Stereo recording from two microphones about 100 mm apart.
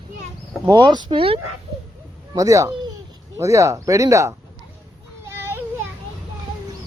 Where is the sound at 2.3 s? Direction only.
35° right (ahead or behind).